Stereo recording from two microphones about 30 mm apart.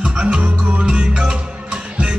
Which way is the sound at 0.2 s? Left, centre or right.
Right.